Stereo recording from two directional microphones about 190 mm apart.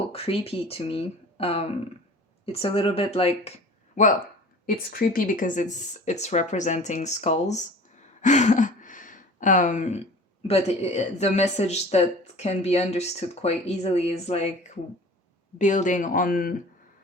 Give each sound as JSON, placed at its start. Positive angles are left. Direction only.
{"t": 0.1, "sound": "speech", "side_deg": 30}
{"t": 4.6, "sound": "speech", "side_deg": 50}
{"t": 8.2, "sound": "a sound", "side_deg": 40}
{"t": 10.4, "sound": "speech", "side_deg": 35}
{"t": 15.5, "sound": "speech", "side_deg": 40}